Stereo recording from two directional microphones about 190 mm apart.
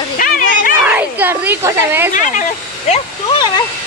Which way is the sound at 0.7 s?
10° right (ahead or behind).